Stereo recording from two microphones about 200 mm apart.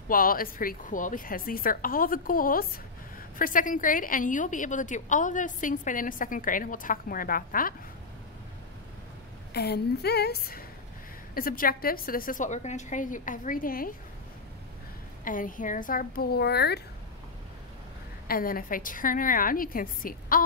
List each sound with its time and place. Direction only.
0.1 s a woman's voice: 45° left (ahead or behind)
9.5 s a woman's voice: 55° left (ahead or behind)
15.2 s a woman's voice: 40° left (ahead or behind)
18.2 s a woman's voice: 45° left (ahead or behind)